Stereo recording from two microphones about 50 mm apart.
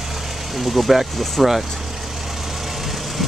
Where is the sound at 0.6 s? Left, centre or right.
Centre.